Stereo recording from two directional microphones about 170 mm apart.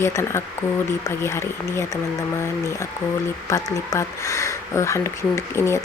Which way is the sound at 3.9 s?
15° left (ahead or behind).